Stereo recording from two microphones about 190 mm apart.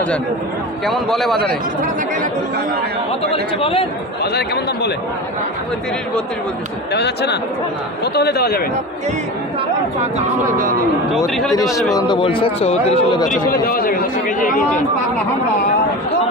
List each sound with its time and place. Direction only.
0.9 s a man's voice: centre (ahead or behind)
3.6 s speech: 30° left (ahead or behind)
4.2 s speech: 60° left (ahead or behind)
6.9 s speech: 60° left (ahead or behind)
10.2 s speech: 50° right (ahead or behind)
11.5 s speech: 20° left (ahead or behind); by 13.4 s 35° left (ahead or behind)
13.5 s speech: 50° left (ahead or behind)